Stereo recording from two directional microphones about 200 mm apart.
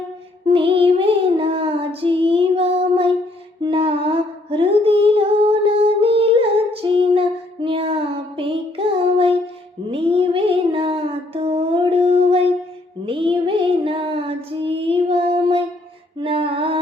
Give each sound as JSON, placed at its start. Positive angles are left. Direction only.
{"t": 0.4, "sound": "child singing", "side_deg": -25}
{"t": 3.6, "sound": "music", "side_deg": -25}
{"t": 6.8, "sound": "female singing", "side_deg": -25}
{"t": 8.4, "sound": "music", "side_deg": -25}
{"t": 9.9, "sound": "child singing", "side_deg": -25}
{"t": 16.1, "sound": "a sound", "side_deg": -25}